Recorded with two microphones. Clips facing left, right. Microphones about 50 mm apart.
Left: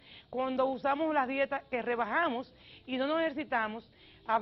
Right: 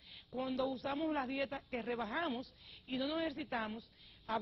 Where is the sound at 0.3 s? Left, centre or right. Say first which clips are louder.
Left 7 dB; left.